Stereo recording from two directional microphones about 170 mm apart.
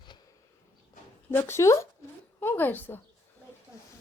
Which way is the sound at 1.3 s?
15° left (ahead or behind).